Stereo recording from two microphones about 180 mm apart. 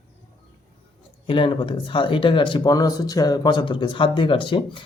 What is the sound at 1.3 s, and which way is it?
Speech, 30° left (ahead or behind).